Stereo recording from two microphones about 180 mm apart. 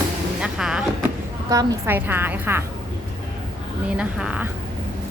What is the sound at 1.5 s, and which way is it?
A woman's voice, 20° right (ahead or behind).